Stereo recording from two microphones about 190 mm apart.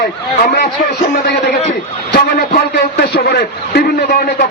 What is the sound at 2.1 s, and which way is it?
A man's voice, 60° left (ahead or behind).